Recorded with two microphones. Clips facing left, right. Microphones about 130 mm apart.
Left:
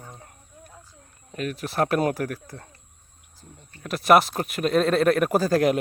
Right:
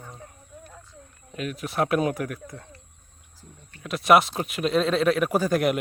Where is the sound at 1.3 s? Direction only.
40° left (ahead or behind).